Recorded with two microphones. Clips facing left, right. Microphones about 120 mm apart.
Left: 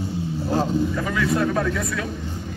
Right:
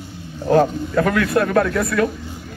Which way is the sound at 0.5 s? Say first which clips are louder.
Right 7 dB; 70° right (ahead or behind).